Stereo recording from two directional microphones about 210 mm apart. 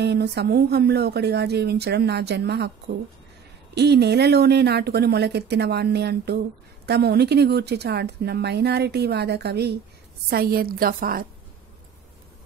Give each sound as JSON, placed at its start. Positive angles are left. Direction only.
{"t": 0.0, "sound": "a woman's voice", "side_deg": -50}
{"t": 3.7, "sound": "a woman's voice", "side_deg": -50}